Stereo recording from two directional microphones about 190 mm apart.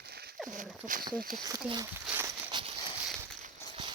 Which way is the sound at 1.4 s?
20° right (ahead or behind).